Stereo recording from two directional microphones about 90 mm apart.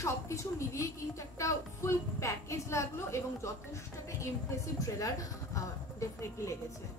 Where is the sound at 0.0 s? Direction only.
35° left (ahead or behind).